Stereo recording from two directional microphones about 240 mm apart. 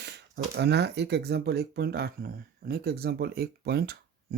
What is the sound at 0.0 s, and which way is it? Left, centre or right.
Speech, right.